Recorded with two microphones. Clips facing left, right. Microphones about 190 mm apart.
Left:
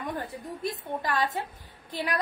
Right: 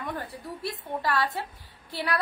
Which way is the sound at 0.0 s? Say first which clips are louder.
Left 1 dB; 20° left (ahead or behind).